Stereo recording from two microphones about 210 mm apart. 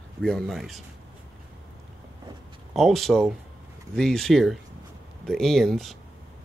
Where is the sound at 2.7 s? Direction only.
Centre (ahead or behind).